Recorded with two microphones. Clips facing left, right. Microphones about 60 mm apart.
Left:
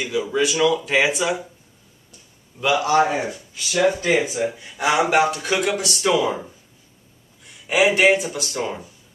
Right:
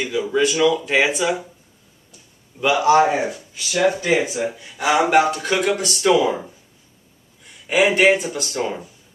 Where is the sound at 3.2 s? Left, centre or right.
Centre.